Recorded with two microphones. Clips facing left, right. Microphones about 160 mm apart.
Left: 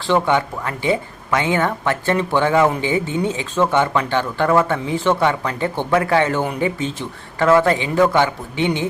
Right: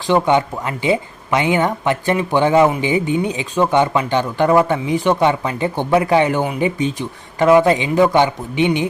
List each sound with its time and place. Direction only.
0.1 s speech: 20° right (ahead or behind)